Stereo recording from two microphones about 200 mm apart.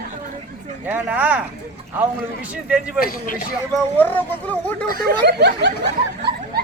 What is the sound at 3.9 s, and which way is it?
Speech, 10° left (ahead or behind).